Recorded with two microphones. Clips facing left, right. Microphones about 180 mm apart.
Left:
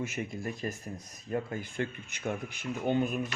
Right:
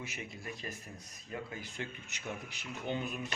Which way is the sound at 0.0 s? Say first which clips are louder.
Left 9 dB; 50° left (ahead or behind).